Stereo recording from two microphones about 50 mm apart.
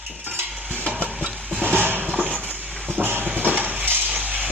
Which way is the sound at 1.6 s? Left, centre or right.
Right.